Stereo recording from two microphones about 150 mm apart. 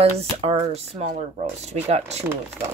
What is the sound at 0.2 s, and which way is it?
Speech, 40° right (ahead or behind).